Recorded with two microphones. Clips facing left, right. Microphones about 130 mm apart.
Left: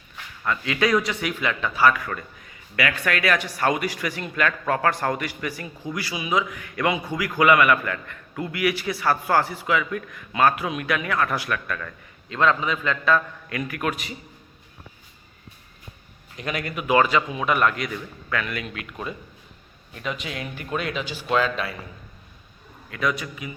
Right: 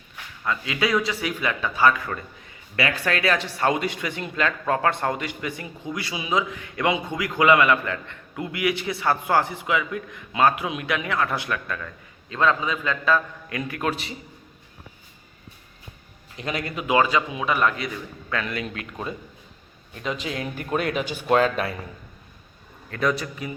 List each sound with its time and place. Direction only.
0.4 s a man's voice: 20° right (ahead or behind)
16.4 s speech: 30° right (ahead or behind)
18.3 s speech: 30° right (ahead or behind)
22.9 s speech: 35° right (ahead or behind)